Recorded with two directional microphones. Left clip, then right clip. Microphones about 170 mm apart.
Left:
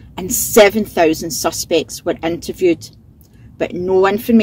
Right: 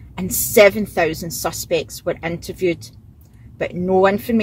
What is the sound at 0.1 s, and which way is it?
Speech, 40° left (ahead or behind).